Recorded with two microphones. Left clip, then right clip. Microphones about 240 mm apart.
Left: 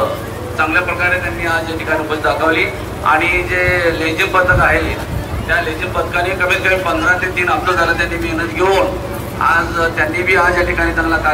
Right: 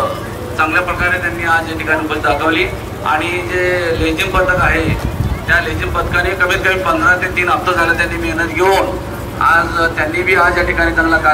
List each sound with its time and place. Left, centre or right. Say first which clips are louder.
0.6 s a man's voice: right 1 dB; right
8.5 s a man's voice: right 1 dB; right
9.4 s speech: right 2 dB; centre